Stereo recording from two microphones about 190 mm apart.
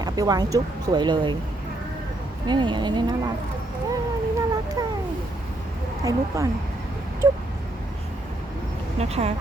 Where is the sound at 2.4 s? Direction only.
25° right (ahead or behind).